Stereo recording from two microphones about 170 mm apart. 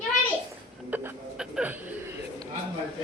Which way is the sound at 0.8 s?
10° right (ahead or behind).